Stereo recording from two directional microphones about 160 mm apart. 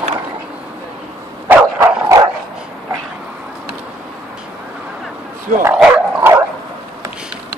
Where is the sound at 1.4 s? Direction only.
15° right (ahead or behind).